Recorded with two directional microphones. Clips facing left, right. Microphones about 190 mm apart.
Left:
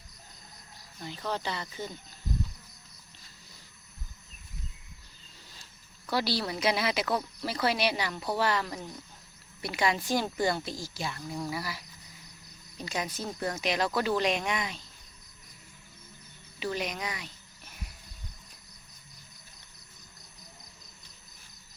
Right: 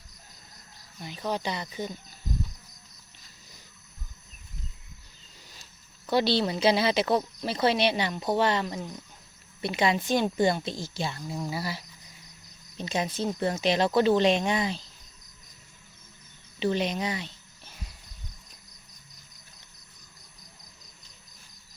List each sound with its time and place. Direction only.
1.0 s speech: 15° right (ahead or behind)
6.1 s speech: 25° right (ahead or behind)
16.6 s speech: 25° right (ahead or behind)